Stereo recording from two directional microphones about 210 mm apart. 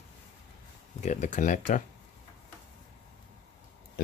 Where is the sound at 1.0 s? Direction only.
35° left (ahead or behind).